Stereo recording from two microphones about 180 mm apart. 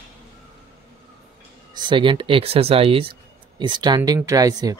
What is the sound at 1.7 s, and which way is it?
Speech, 25° right (ahead or behind).